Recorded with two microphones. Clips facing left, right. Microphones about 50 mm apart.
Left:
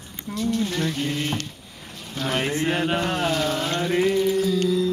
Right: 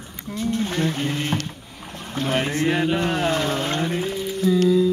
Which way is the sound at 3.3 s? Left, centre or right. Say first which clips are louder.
Right 1 dB; right.